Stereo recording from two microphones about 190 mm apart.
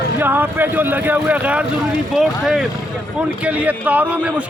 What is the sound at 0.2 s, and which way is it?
A man's voice, 10° right (ahead or behind).